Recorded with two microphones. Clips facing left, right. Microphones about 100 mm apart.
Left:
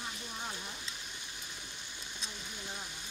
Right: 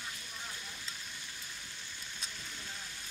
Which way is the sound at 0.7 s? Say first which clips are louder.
Left 1 dB; 20° left (ahead or behind).